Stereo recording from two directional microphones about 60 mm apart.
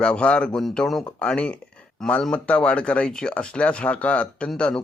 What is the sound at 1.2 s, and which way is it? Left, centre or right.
A man's voice, centre.